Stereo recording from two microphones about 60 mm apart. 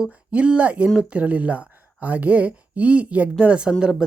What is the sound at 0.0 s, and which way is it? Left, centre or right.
Speech, right.